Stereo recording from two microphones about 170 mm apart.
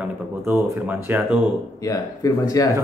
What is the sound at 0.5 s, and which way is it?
Mantra, 10° right (ahead or behind).